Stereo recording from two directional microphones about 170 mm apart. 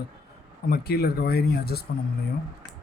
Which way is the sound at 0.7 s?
65° left (ahead or behind).